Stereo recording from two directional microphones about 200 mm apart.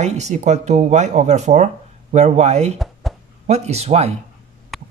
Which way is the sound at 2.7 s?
Centre (ahead or behind).